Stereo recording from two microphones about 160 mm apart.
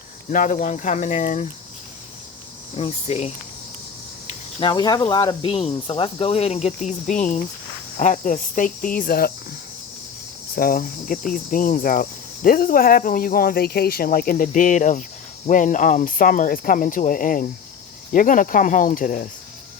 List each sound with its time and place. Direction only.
0.3 s speech: 55° left (ahead or behind)
2.7 s speech: 40° left (ahead or behind)
4.6 s speech: 25° left (ahead or behind); by 7.4 s 50° left (ahead or behind)
7.9 s cricket: 50° left (ahead or behind)